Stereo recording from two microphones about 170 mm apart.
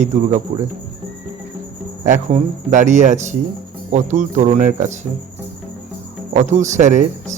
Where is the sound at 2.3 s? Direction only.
45° right (ahead or behind).